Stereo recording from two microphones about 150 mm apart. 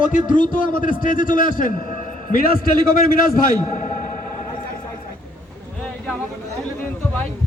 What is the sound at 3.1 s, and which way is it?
A man's voice, 65° left (ahead or behind).